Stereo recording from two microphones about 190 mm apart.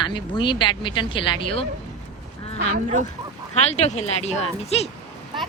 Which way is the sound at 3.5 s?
35° left (ahead or behind).